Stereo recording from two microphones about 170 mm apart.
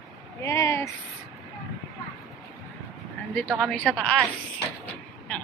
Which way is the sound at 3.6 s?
5° left (ahead or behind).